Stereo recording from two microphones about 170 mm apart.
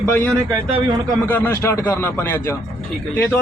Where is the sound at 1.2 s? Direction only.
10° left (ahead or behind).